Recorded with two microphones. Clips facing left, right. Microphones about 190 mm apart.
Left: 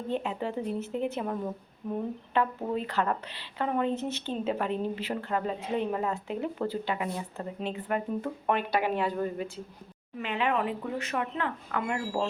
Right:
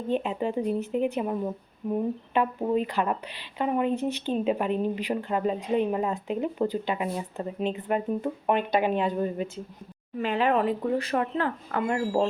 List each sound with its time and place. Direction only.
0.1 s a woman's voice: 20° right (ahead or behind)
10.2 s speech: 40° right (ahead or behind)